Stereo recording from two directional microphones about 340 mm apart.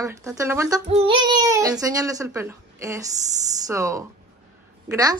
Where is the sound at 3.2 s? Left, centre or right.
Right.